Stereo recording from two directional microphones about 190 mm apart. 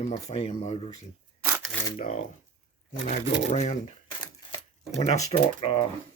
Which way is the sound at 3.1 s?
35° left (ahead or behind).